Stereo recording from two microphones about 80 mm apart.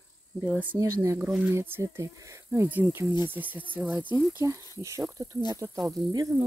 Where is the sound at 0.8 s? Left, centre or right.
Right.